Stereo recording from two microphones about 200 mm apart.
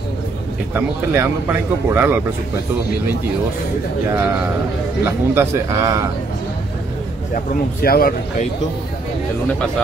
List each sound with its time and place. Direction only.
0.7 s speech: 10° right (ahead or behind)
5.0 s speech: 15° right (ahead or behind)
7.8 s speech: 50° left (ahead or behind)